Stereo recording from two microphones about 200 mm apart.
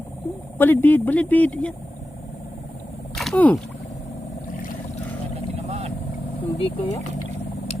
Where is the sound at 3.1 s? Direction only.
5° left (ahead or behind).